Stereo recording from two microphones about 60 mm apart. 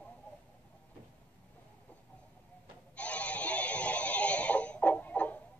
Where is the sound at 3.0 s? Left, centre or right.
Left.